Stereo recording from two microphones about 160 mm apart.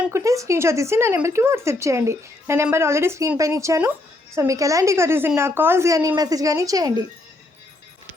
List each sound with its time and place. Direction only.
0.1 s speech: 20° right (ahead or behind)